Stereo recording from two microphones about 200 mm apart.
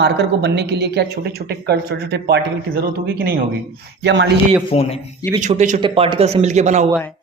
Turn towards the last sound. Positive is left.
turn(degrees=-35)  # may be behind; listen again after turning